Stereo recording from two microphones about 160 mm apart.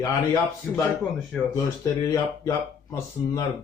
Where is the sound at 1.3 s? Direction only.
Centre (ahead or behind).